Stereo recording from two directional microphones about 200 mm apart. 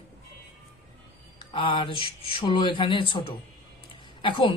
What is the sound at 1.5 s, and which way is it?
Speech, 25° left (ahead or behind).